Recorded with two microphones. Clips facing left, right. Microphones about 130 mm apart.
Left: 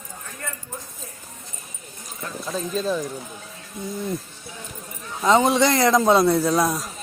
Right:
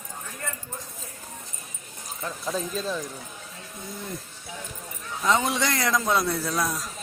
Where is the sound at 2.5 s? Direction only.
5° right (ahead or behind).